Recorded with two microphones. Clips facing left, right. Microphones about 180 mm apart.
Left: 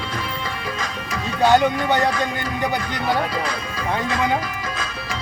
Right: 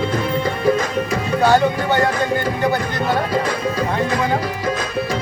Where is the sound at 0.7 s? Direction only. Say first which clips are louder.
Right 11 dB; 45° right (ahead or behind).